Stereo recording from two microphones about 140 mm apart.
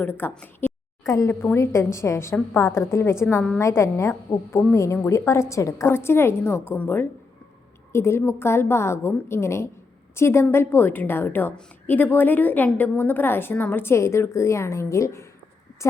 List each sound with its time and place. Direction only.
0.0 s a woman's voice: 15° left (ahead or behind)